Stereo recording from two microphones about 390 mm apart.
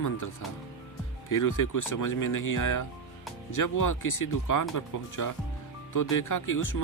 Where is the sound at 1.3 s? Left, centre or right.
Left.